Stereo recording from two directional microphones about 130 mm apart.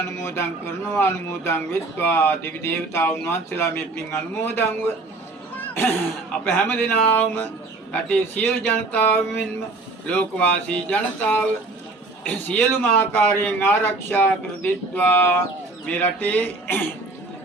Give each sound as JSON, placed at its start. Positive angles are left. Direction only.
{"t": 0.2, "sound": "a man's voice", "side_deg": 20}
{"t": 5.5, "sound": "music", "side_deg": 15}
{"t": 6.4, "sound": "a man's voice", "side_deg": 15}